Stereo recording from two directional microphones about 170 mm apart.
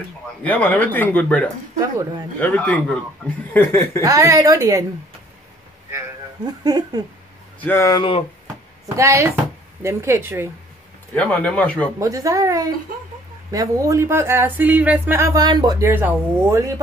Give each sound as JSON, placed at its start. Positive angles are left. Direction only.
{"t": 0.4, "sound": "speech", "side_deg": 10}
{"t": 1.8, "sound": "speech", "side_deg": -20}
{"t": 2.4, "sound": "speech", "side_deg": 10}
{"t": 4.0, "sound": "a woman's voice", "side_deg": -20}
{"t": 5.9, "sound": "a sound", "side_deg": -20}
{"t": 7.6, "sound": "speech", "side_deg": 15}
{"t": 8.9, "sound": "speech", "side_deg": -15}
{"t": 11.1, "sound": "speech", "side_deg": 10}
{"t": 12.0, "sound": "a woman's voice", "side_deg": -20}